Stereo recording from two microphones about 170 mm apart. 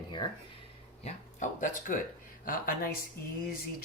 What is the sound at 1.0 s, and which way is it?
Speech, 45° left (ahead or behind).